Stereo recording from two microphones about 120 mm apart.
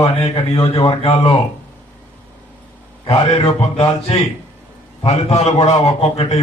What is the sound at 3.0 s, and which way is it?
Speech, 25° left (ahead or behind).